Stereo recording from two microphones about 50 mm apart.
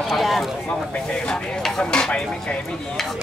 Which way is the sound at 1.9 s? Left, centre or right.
Centre.